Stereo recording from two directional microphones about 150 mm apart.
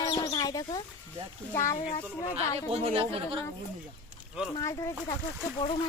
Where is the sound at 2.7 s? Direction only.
40° right (ahead or behind).